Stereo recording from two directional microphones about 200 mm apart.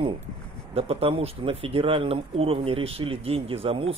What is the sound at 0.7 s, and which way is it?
Speech, 30° right (ahead or behind).